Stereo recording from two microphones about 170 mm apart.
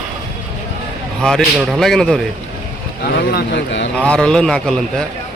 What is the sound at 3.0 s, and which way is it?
Speech, 65° left (ahead or behind).